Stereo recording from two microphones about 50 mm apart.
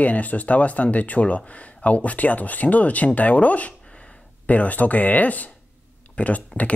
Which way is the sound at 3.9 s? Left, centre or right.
Centre.